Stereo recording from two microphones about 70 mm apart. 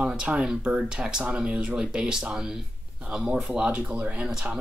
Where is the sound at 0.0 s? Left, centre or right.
Centre.